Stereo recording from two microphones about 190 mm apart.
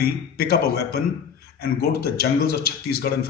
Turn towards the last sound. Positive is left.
turn(degrees=55)  # may be behind; listen again after turning